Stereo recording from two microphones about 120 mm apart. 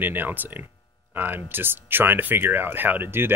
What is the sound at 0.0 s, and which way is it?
Speech, 15° right (ahead or behind).